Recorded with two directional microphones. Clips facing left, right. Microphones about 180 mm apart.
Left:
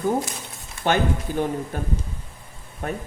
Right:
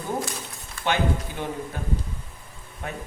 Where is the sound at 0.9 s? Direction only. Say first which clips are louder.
Left 3 dB; 45° left (ahead or behind).